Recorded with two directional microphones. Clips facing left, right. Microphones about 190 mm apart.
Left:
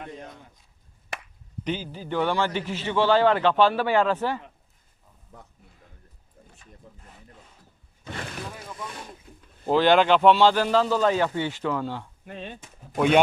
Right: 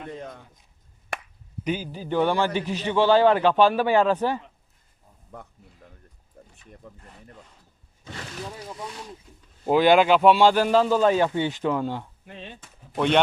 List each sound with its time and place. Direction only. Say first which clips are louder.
1.1 s chop: right 4 dB; 55° right (ahead or behind)
1.6 s a man's voice: right 2 dB; 10° right (ahead or behind)
6.4 s a sound: right 4 dB; 55° right (ahead or behind)
6.8 s speech: right 5 dB; 65° right (ahead or behind)
8.0 s speech: left 1 dB; 60° left (ahead or behind)
9.6 s a man's voice: right 1 dB; 10° right (ahead or behind)
12.2 s speech: left 3 dB; 50° left (ahead or behind)